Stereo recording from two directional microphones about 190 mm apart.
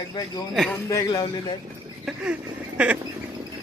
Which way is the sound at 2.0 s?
5° right (ahead or behind).